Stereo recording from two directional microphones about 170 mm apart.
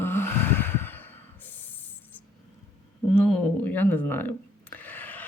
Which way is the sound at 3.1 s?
5° left (ahead or behind).